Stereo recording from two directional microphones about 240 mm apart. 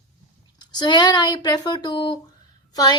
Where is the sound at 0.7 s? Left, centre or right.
Centre.